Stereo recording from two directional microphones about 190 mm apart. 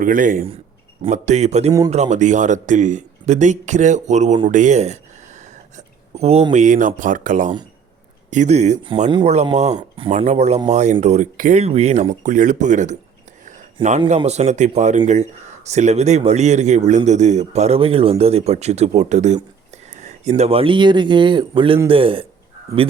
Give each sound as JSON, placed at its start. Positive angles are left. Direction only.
{"t": 0.0, "sound": "speech", "side_deg": -45}
{"t": 13.8, "sound": "speech", "side_deg": -25}